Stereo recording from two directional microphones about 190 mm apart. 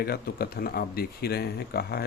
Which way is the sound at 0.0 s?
55° left (ahead or behind).